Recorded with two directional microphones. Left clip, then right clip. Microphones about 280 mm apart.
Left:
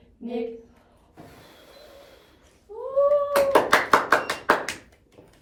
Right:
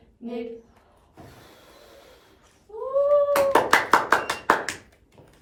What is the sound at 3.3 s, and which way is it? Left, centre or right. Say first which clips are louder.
Hands: even; centre.